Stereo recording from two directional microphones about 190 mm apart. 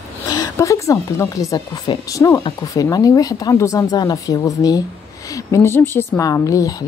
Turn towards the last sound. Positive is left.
turn(degrees=20)  # may be behind; listen again after turning